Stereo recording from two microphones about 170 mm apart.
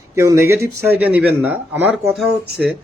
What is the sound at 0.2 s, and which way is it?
Speech, 15° right (ahead or behind).